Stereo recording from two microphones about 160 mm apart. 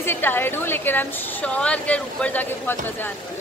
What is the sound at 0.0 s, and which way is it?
Speech, 15° left (ahead or behind).